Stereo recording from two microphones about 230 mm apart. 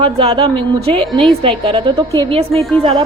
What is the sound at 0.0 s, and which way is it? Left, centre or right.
Speech, right.